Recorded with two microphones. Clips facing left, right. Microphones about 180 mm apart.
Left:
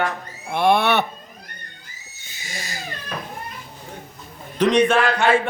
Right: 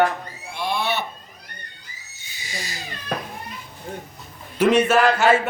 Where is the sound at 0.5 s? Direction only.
60° left (ahead or behind).